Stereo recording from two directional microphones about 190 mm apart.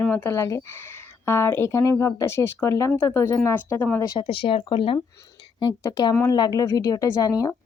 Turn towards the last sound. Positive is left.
turn(degrees=20)  # may be behind; listen again after turning